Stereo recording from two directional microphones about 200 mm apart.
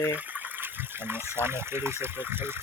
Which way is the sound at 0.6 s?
10° right (ahead or behind).